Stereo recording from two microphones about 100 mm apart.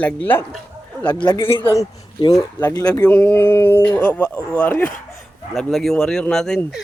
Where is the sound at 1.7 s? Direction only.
35° left (ahead or behind).